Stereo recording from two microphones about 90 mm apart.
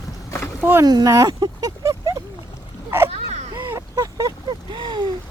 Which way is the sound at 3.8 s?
40° right (ahead or behind).